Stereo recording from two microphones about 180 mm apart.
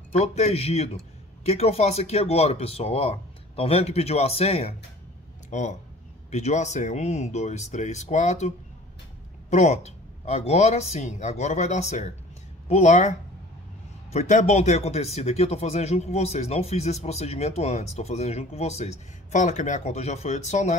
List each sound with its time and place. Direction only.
0.1 s speech: 35° left (ahead or behind)
14.1 s speech: 40° left (ahead or behind)